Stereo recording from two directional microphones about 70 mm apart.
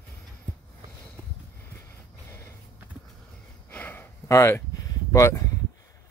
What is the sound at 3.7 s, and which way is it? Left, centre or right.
Gasp, left.